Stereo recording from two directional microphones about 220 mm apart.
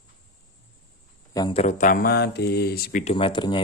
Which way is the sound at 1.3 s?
20° left (ahead or behind).